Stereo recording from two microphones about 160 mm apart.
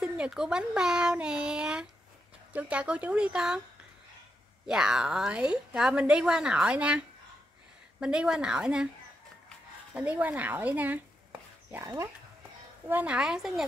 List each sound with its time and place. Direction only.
0.0 s a woman's voice: 5° right (ahead or behind)
4.6 s a woman's voice: 5° right (ahead or behind)
9.9 s a woman's voice: 10° right (ahead or behind)